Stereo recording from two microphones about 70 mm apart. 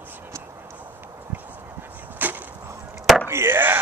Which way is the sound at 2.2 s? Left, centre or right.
Right.